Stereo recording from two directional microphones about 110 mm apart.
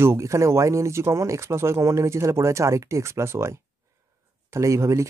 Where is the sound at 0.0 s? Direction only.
25° right (ahead or behind).